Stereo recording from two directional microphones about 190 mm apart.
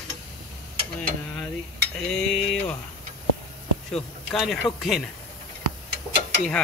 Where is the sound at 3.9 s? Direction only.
Centre (ahead or behind).